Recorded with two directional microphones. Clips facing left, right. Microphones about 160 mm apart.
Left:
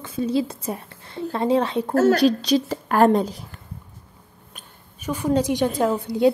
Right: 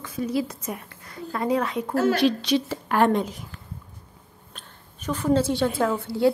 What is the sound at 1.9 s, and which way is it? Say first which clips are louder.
A woman's voice: left 4 dB; 40° left (ahead or behind).